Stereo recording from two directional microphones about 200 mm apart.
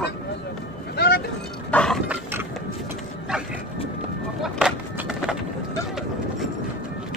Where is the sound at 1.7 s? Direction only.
5° left (ahead or behind).